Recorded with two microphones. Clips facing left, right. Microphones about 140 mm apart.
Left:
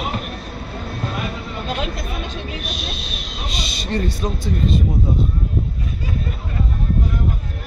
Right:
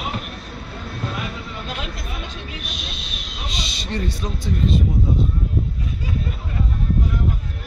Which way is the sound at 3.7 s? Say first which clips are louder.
Left 5 dB; 50° left (ahead or behind).